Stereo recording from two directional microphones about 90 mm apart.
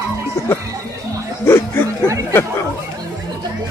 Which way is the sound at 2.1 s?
35° right (ahead or behind).